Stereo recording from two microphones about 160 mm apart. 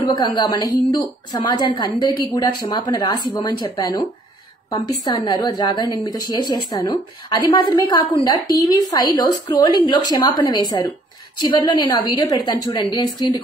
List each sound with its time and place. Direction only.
0.0 s a woman's voice: 25° left (ahead or behind)
5.0 s a woman's voice: 25° left (ahead or behind)